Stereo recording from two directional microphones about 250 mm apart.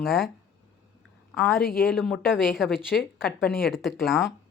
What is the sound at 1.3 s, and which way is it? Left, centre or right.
Speech, centre.